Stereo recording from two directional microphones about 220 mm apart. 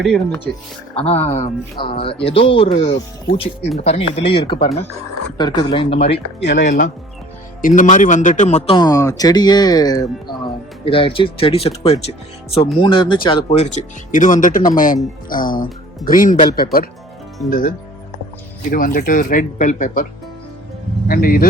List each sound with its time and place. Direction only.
0.0 s speech: centre (ahead or behind)
0.9 s a man's voice: 30° left (ahead or behind)
6.4 s speech: 50° left (ahead or behind)
6.7 s a man's voice: 35° left (ahead or behind)
21.1 s speech: 40° left (ahead or behind)